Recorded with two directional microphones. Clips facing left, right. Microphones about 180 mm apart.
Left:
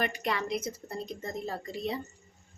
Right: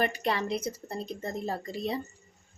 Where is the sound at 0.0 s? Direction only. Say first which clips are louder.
Right 3 dB; 30° right (ahead or behind).